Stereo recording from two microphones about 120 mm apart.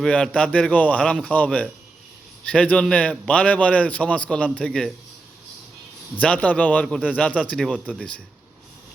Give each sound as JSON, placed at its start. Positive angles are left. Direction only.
{"t": 0.0, "sound": "a man's voice", "side_deg": 5}
{"t": 6.1, "sound": "a man's voice", "side_deg": 10}